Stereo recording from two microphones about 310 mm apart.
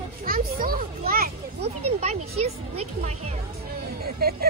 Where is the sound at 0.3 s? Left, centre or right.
Right.